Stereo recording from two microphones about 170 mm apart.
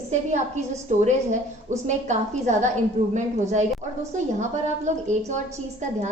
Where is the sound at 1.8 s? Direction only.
45° right (ahead or behind).